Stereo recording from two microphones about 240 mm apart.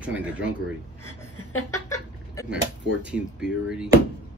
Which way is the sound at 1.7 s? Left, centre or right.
Centre.